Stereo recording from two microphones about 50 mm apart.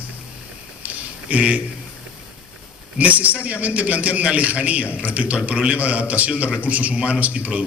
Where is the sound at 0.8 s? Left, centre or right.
Right.